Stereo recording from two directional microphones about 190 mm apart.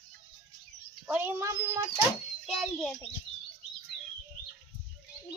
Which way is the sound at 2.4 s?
Centre (ahead or behind).